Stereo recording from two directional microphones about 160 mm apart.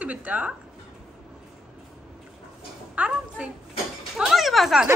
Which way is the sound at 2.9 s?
5° right (ahead or behind).